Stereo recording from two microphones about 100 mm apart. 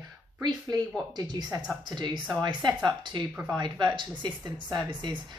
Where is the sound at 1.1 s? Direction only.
45° right (ahead or behind).